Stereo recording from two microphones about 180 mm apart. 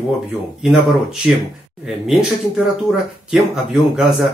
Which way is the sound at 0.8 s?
Centre (ahead or behind).